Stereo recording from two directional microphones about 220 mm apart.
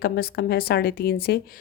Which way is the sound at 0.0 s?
45° left (ahead or behind).